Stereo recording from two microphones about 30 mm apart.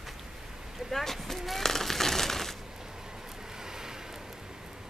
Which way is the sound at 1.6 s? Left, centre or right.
Centre.